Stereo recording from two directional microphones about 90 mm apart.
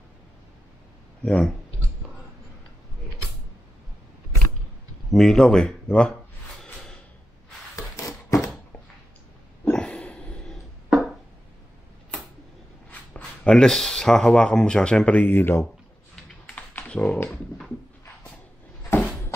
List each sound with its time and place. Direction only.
1.2 s speech: 10° left (ahead or behind)
5.1 s speech: 5° left (ahead or behind)
7.7 s a sound: 35° left (ahead or behind)
9.7 s a sound: 10° left (ahead or behind)
13.1 s speech: 10° left (ahead or behind)
16.2 s typing: 10° left (ahead or behind)
16.5 s typing: 20° left (ahead or behind)